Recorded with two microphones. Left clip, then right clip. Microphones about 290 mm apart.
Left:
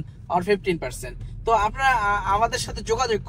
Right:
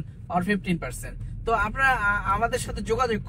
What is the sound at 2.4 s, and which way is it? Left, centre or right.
Speech, left.